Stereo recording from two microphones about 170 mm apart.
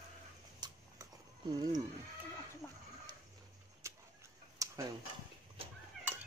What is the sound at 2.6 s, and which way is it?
Chicken, 10° left (ahead or behind).